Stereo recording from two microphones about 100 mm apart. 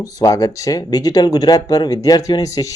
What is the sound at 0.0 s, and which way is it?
Speech, 35° left (ahead or behind).